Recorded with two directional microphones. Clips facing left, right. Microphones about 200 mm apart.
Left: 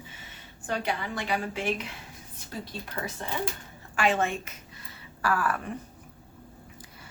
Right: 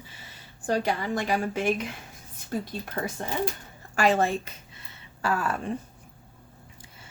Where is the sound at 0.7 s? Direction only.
40° right (ahead or behind).